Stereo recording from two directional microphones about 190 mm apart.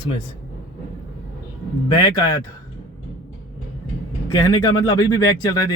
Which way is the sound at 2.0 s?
25° left (ahead or behind).